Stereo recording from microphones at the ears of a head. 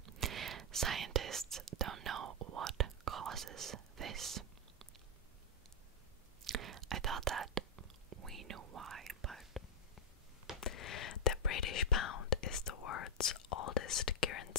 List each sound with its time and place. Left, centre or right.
0.0 s whispering: right
6.4 s whispering: right
10.6 s whispering: left